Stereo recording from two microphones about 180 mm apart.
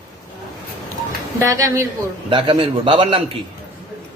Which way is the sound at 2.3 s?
30° right (ahead or behind).